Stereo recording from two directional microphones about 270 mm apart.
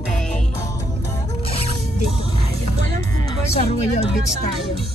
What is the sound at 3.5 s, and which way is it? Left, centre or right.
Speech, left.